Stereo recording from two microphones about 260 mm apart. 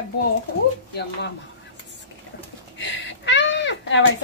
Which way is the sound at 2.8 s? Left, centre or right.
Left.